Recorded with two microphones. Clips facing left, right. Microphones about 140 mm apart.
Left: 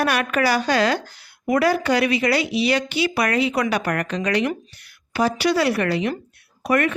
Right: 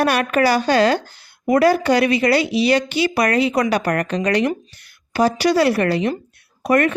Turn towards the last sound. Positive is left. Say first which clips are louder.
# right 4 dB
turn(degrees=-35)  # may be behind; listen again after turning